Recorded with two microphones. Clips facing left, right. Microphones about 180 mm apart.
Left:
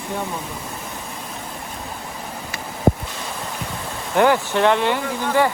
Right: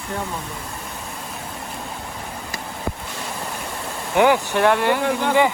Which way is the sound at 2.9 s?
40° left (ahead or behind).